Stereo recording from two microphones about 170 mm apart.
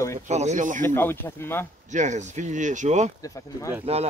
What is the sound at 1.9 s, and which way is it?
Speech, 45° right (ahead or behind).